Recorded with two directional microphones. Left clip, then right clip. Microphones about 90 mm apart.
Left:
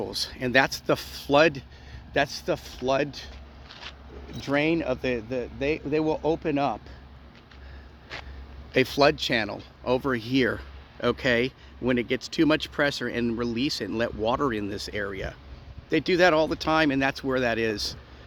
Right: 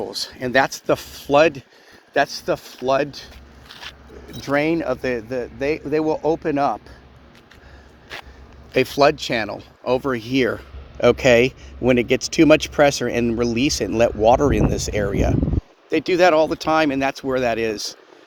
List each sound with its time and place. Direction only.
0.0 s speech: 20° left (ahead or behind)
2.1 s speech: 5° left (ahead or behind)
4.4 s speech: centre (ahead or behind)
8.7 s speech: 5° left (ahead or behind)